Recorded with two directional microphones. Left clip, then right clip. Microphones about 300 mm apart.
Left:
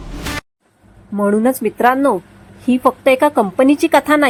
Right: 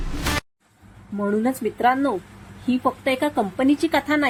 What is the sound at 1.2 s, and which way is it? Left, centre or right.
A woman's voice, left.